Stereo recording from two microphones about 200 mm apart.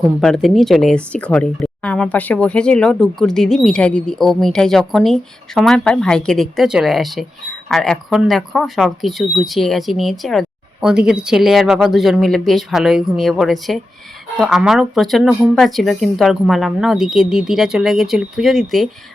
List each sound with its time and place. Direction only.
0.2 s speech: centre (ahead or behind)